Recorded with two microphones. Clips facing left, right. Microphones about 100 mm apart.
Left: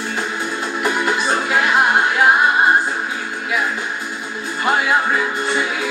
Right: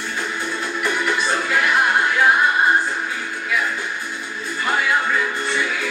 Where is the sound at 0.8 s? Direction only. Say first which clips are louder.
Left 3 dB; 20° left (ahead or behind).